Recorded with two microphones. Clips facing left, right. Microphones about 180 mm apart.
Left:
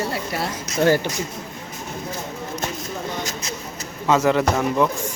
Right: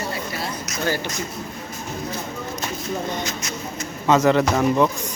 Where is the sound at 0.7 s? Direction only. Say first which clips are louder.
Left 8 dB; 30° left (ahead or behind).